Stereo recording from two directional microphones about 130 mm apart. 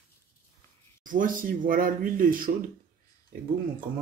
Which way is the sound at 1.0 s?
90° right.